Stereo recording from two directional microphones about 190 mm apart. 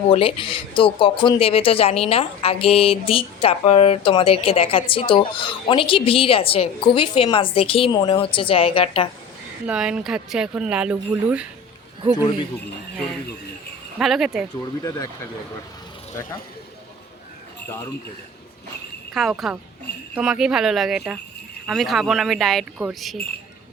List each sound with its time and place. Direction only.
0.1 s speech: 30° left (ahead or behind)
9.6 s speech: 5° right (ahead or behind)
12.1 s speech: 20° left (ahead or behind)
14.0 s speech: centre (ahead or behind)
14.8 s speech: 20° left (ahead or behind)
19.1 s speech: centre (ahead or behind)